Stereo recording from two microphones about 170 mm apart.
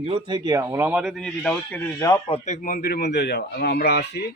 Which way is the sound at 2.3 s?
45° left (ahead or behind).